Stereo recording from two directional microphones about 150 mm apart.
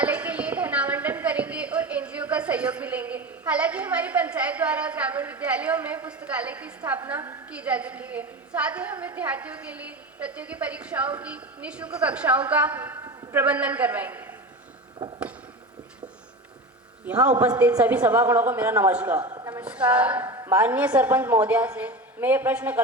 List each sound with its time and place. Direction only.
0.0 s a woman's voice: 10° right (ahead or behind)
17.1 s a woman's voice: 10° right (ahead or behind)
19.3 s a sound: 25° right (ahead or behind)
19.6 s a woman's voice: 10° right (ahead or behind)
20.2 s a sound: 25° right (ahead or behind)
20.5 s a woman's voice: 10° right (ahead or behind)